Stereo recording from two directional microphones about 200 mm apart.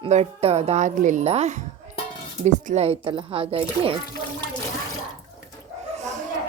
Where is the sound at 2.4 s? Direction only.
35° right (ahead or behind).